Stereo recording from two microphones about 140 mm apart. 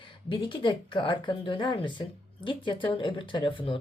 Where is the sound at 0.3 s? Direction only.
35° left (ahead or behind).